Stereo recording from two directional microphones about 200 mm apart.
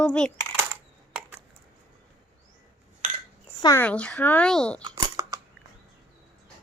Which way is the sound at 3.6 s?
15° left (ahead or behind).